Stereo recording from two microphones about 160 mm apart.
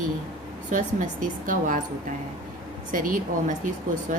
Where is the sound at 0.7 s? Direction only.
55° right (ahead or behind).